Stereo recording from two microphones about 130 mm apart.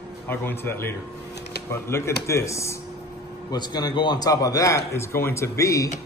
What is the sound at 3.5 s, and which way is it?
A man's voice, 35° left (ahead or behind).